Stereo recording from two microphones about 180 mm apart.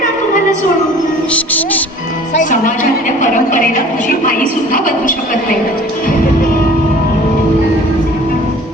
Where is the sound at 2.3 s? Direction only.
45° left (ahead or behind).